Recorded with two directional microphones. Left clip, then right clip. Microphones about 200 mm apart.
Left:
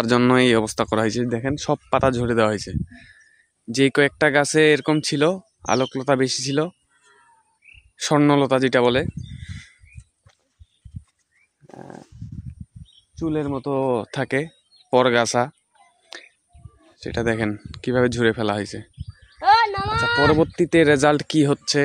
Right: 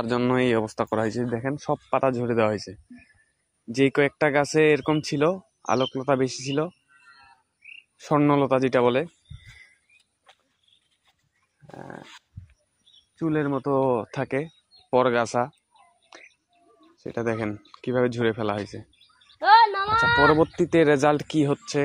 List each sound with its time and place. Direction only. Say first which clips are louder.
0.0 s speech: left 6 dB; 55° left (ahead or behind)
8.0 s speech: left 3 dB; 45° left (ahead or behind)
11.7 s speech: even; 35° left (ahead or behind)
13.2 s speech: left 1 dB; 20° left (ahead or behind); by 15.5 s 45° left (ahead or behind)
16.1 s a sound: left 8 dB; 40° left (ahead or behind)
16.9 s speech: left 4 dB; 40° left (ahead or behind)
19.4 s a sound: even; 15° left (ahead or behind)
20.2 s speech: left 1 dB; 30° left (ahead or behind); by 21.8 s 45° left (ahead or behind)